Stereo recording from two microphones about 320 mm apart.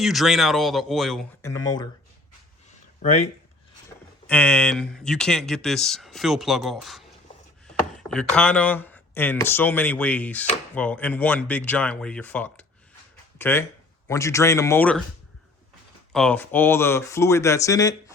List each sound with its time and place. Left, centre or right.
0.0 s speech: centre
3.0 s speech: left
4.3 s speech: centre
16.1 s speech: centre